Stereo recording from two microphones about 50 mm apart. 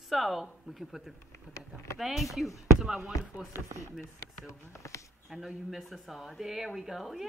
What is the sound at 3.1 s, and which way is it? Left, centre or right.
Speech, left.